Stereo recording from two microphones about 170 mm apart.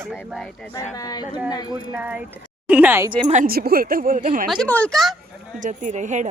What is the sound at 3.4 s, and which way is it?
Speech, 60° right (ahead or behind).